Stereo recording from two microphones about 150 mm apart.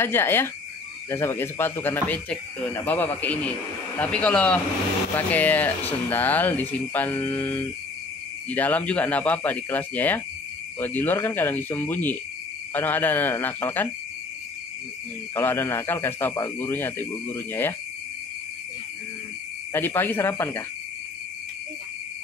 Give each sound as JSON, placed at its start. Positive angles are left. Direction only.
{"t": 0.0, "sound": "speech", "side_deg": 15}
{"t": 15.3, "sound": "speech", "side_deg": 15}
{"t": 19.7, "sound": "speech", "side_deg": 15}